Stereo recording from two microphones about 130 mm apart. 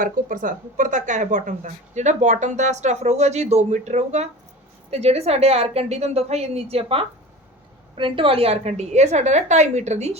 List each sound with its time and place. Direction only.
0.0 s a woman's voice: 90° right; by 10.2 s 60° right (ahead or behind)